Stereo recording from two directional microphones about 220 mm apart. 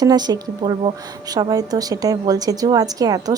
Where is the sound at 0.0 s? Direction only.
20° right (ahead or behind).